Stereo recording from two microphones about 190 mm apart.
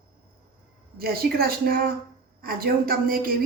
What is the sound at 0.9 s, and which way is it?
A woman's voice, 50° right (ahead or behind).